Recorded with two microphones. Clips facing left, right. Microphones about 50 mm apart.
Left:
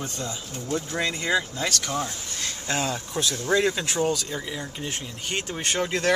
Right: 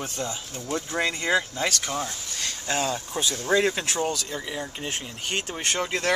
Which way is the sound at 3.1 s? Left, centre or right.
Centre.